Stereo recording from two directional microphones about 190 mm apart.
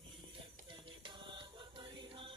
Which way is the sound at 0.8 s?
25° right (ahead or behind).